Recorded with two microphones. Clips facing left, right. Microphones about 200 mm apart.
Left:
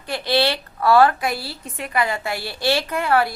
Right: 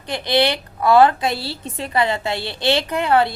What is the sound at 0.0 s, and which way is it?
A woman's voice, 20° right (ahead or behind).